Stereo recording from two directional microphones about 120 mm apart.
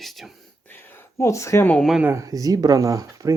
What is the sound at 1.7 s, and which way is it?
Speech, centre (ahead or behind).